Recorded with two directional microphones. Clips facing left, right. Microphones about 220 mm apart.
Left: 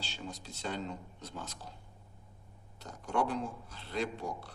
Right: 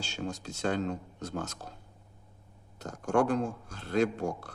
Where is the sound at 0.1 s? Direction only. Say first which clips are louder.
Right 7 dB; 45° right (ahead or behind).